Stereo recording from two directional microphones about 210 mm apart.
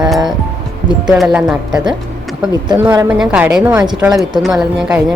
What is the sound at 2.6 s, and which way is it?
A woman's voice, 20° right (ahead or behind).